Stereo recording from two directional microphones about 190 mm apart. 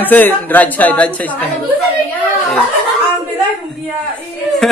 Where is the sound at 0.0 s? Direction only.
10° left (ahead or behind).